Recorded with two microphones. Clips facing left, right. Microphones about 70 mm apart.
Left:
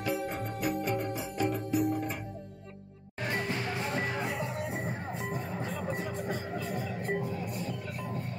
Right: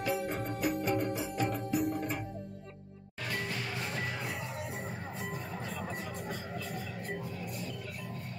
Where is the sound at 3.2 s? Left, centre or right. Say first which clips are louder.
Left 4 dB; left.